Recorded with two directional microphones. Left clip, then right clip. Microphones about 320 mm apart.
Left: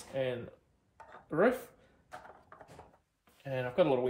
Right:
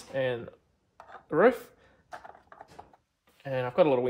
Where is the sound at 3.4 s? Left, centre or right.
Right.